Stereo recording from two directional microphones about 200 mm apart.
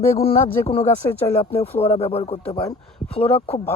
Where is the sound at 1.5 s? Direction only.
10° left (ahead or behind).